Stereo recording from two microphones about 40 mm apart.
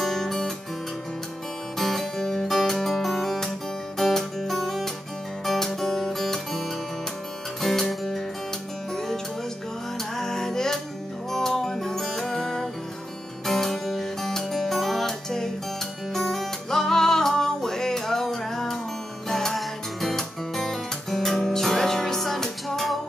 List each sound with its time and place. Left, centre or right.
0.0 s guitar: centre
1.8 s music: centre
4.1 s guitar: centre
5.4 s music: centre
7.6 s music: centre
10.1 s music: centre